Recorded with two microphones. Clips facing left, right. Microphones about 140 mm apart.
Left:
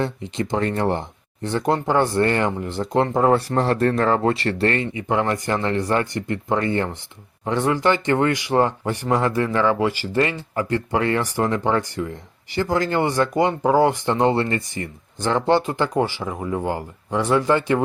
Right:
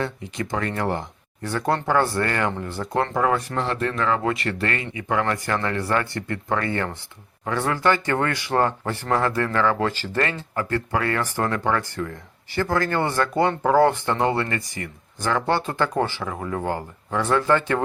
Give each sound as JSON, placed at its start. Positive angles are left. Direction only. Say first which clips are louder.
{"t": 0.0, "sound": "speech", "louder": "left 3 dB", "side_deg": 25}